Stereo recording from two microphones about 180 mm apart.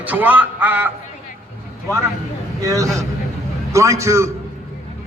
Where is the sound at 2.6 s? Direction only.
20° right (ahead or behind).